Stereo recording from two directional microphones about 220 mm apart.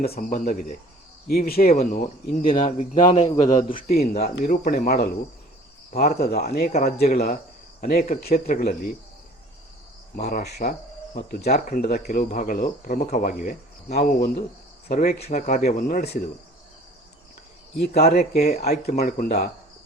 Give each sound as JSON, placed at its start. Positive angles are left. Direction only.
{"t": 0.1, "sound": "a man's voice", "side_deg": 40}
{"t": 3.7, "sound": "speech", "side_deg": 40}
{"t": 6.7, "sound": "speech", "side_deg": 35}
{"t": 10.2, "sound": "speech", "side_deg": 40}
{"t": 18.0, "sound": "speech", "side_deg": 45}
{"t": 18.3, "sound": "speech", "side_deg": 30}